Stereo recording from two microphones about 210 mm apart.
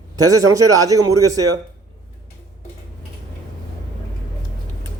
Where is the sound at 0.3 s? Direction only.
15° right (ahead or behind).